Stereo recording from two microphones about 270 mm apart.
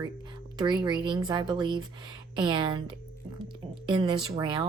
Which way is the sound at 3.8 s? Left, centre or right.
Centre.